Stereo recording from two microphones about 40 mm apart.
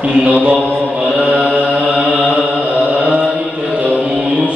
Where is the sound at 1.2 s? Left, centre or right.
Right.